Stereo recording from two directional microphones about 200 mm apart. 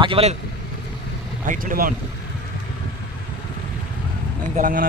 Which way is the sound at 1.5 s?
45° right (ahead or behind).